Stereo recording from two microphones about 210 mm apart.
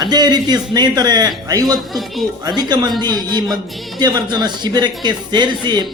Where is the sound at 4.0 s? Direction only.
20° right (ahead or behind).